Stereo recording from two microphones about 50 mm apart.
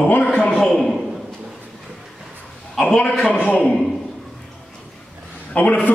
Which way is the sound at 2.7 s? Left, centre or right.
Centre.